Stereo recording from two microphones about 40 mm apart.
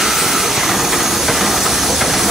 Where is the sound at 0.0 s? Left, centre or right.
Centre.